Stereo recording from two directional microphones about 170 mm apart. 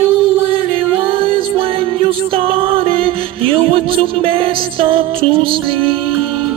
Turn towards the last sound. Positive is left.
turn(degrees=-35)  # may be behind; listen again after turning